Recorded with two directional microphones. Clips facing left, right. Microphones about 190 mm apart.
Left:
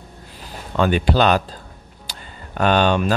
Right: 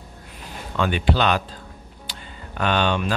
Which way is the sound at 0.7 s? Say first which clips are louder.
Left 4 dB; 40° left (ahead or behind).